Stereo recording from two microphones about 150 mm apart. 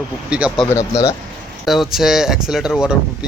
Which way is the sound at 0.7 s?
20° left (ahead or behind).